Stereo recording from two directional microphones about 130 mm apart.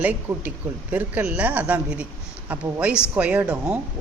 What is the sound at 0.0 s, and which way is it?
Speech, 10° right (ahead or behind).